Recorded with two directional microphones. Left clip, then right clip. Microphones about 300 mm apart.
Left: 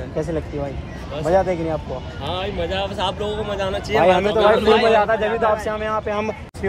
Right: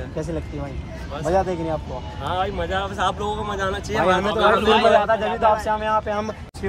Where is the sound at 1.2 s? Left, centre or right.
Centre.